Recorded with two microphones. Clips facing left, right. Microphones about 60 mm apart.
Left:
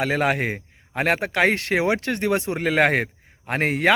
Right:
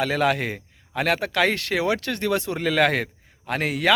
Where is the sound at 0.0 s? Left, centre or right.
Left.